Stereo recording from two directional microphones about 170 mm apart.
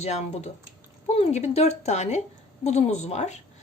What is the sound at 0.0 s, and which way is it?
A woman's voice, 40° left (ahead or behind).